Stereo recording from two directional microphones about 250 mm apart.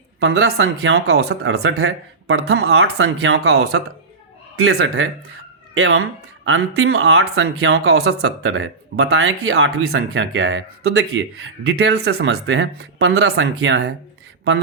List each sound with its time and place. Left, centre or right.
0.2 s speech: right